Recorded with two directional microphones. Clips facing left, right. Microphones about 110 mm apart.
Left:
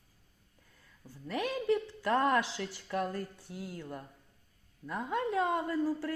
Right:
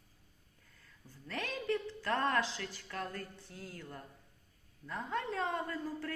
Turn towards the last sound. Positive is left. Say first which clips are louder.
# left 7 dB
turn(degrees=15)  # may be behind; listen again after turning